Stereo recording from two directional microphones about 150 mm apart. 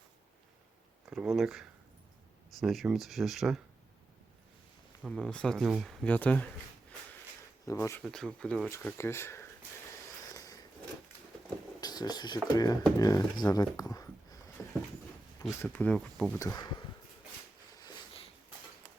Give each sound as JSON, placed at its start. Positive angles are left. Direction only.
{"t": 1.1, "sound": "speech", "side_deg": -5}
{"t": 5.0, "sound": "speech", "side_deg": 5}
{"t": 7.6, "sound": "speech", "side_deg": 20}
{"t": 8.0, "sound": "speech", "side_deg": 5}
{"t": 10.3, "sound": "a sound", "side_deg": 25}
{"t": 11.8, "sound": "speech", "side_deg": 25}
{"t": 14.6, "sound": "a sound", "side_deg": 20}
{"t": 15.6, "sound": "speech", "side_deg": 10}
{"t": 16.4, "sound": "speech", "side_deg": 25}